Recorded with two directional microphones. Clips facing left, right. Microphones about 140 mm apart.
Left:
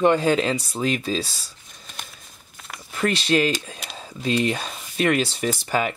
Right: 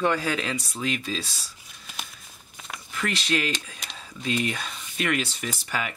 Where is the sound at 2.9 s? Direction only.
35° left (ahead or behind).